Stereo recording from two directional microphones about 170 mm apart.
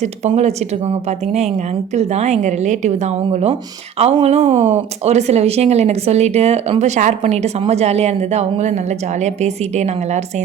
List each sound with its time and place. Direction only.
0.0 s a woman's voice: 40° right (ahead or behind)